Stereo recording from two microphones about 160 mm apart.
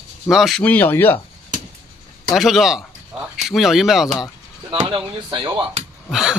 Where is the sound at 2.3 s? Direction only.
Centre (ahead or behind).